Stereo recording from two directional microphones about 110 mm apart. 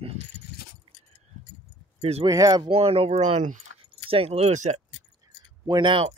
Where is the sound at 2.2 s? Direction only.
35° right (ahead or behind).